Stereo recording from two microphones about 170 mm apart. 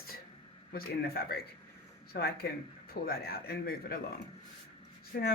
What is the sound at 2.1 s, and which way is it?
Speech, 75° left (ahead or behind).